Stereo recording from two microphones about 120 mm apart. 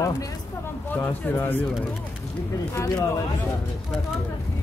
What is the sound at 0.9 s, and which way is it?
Speech, 15° left (ahead or behind).